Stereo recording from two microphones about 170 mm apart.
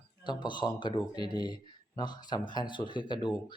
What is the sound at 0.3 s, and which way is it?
Speech, 25° left (ahead or behind).